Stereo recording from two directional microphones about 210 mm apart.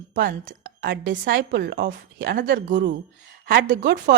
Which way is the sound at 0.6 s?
40° right (ahead or behind).